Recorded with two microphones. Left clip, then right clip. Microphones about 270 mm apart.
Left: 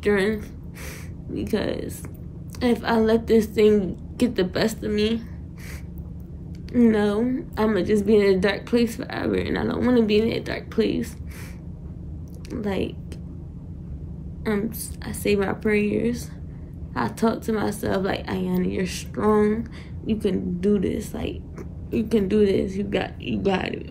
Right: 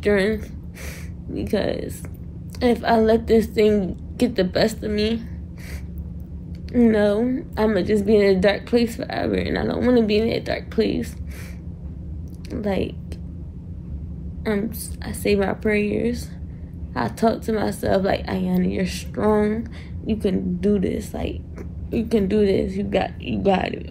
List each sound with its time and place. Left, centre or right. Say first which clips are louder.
0.0 s a woman's voice: right 2 dB; centre
6.7 s a woman's voice: right 3 dB; centre
12.4 s speech: right 3 dB; centre
14.4 s a woman's voice: right 2 dB; centre